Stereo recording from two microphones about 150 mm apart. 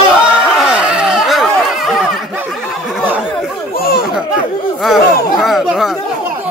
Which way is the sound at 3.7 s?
85° left.